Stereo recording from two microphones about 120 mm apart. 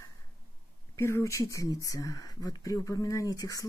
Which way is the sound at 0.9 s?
25° left (ahead or behind).